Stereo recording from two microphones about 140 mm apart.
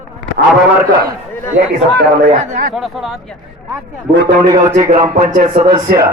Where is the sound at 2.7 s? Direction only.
Centre (ahead or behind).